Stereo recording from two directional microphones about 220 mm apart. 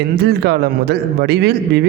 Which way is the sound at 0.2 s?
45° right (ahead or behind).